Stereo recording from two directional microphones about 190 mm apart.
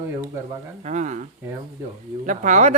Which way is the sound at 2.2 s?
40° right (ahead or behind).